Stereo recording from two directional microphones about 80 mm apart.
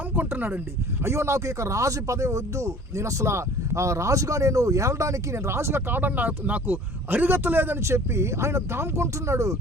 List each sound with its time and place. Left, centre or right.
0.2 s speech: right
1.0 s speech: right